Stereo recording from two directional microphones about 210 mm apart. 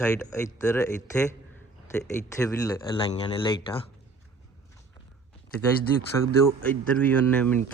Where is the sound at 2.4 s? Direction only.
15° left (ahead or behind).